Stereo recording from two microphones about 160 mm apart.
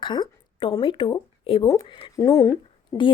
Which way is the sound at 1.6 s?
20° left (ahead or behind).